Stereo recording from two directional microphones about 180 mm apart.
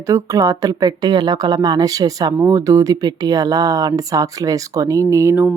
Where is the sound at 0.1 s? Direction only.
20° right (ahead or behind).